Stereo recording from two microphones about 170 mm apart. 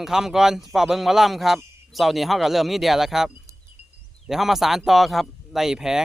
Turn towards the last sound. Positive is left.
turn(degrees=-5)  # may be behind; listen again after turning